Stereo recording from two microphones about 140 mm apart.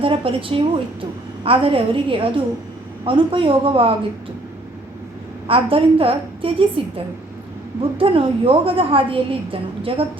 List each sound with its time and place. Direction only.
0.0 s a woman's voice: 40° right (ahead or behind)
5.5 s a woman's voice: 40° right (ahead or behind)